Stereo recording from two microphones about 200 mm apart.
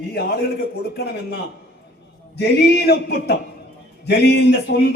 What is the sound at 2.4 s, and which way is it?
A man's voice, 55° left (ahead or behind).